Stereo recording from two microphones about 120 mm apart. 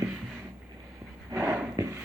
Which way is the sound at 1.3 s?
25° right (ahead or behind).